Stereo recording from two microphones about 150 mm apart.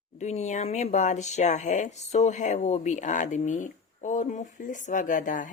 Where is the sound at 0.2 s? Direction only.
50° left (ahead or behind).